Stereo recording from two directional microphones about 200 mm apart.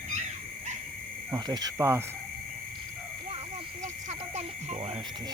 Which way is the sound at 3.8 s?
35° right (ahead or behind).